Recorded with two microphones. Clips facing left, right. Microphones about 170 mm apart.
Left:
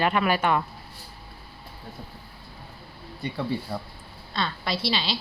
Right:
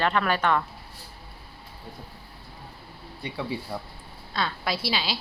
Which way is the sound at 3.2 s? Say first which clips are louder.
Left 3 dB; 5° right (ahead or behind).